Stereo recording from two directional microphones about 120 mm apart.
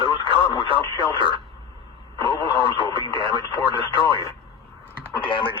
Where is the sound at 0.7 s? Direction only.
40° right (ahead or behind).